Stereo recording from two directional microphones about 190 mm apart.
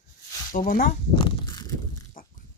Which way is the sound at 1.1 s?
25° left (ahead or behind).